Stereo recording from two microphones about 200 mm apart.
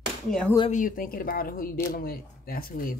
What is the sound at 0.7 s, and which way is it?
Speech, 45° left (ahead or behind).